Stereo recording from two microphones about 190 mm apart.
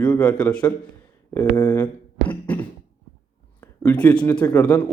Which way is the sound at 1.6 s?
10° left (ahead or behind).